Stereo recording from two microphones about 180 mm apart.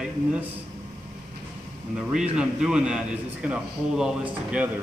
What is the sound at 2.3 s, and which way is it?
A man's voice, 5° right (ahead or behind).